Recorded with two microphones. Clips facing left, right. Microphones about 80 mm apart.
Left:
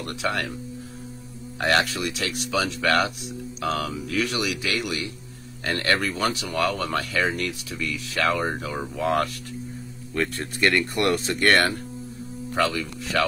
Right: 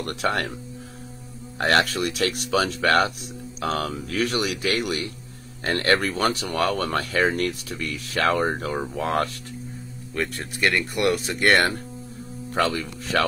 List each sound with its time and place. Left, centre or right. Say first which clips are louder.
0.0 s speech: right 2 dB; right
1.6 s speech: right 2 dB; right
10.1 s speech: left 2 dB; centre
11.3 s speech: even; centre
12.5 s speech: right 1 dB; right